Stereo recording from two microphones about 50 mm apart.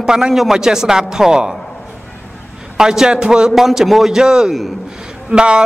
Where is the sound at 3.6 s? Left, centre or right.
Centre.